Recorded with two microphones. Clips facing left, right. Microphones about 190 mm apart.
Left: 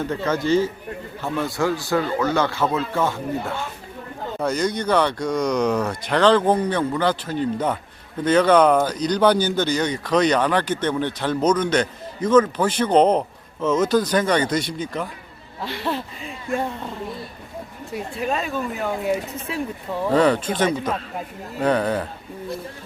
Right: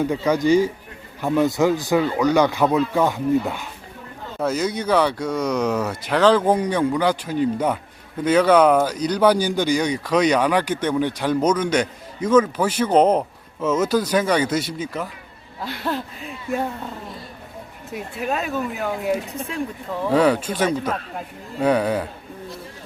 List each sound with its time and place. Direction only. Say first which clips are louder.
0.3 s speech: right 3 dB; 15° right (ahead or behind)
4.4 s speech: even; 5° right (ahead or behind)
17.9 s speech: even; 5° right (ahead or behind)
20.1 s speech: even; 10° right (ahead or behind)